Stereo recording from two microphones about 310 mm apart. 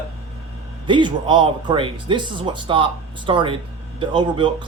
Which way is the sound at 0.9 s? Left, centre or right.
Centre.